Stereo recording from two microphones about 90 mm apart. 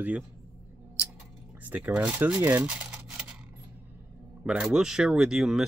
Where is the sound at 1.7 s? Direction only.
15° right (ahead or behind).